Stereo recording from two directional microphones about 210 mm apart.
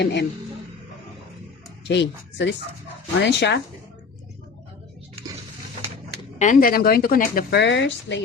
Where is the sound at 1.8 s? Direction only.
55° left (ahead or behind).